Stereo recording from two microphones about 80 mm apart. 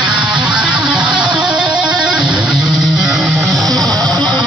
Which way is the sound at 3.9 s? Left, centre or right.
Right.